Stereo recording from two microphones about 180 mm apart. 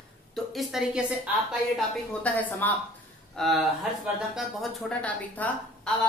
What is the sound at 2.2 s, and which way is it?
A man's voice, 10° left (ahead or behind).